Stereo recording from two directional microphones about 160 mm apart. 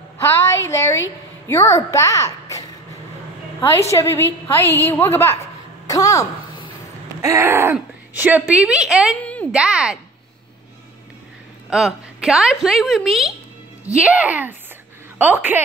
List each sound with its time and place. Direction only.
0.2 s a woman's voice: 15° left (ahead or behind)
3.9 s a woman's voice: 15° left (ahead or behind)
5.9 s a sound: 20° left (ahead or behind)
7.2 s speech: 20° right (ahead or behind); by 9.1 s 5° right (ahead or behind)
9.2 s a sound: 10° left (ahead or behind)
9.5 s a woman's voice: 5° right (ahead or behind)
11.7 s a woman's voice: 5° right (ahead or behind)